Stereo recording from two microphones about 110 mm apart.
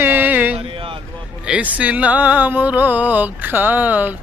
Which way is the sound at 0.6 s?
55° right (ahead or behind).